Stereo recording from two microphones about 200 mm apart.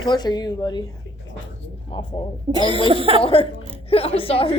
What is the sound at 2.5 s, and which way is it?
Speech, 20° right (ahead or behind).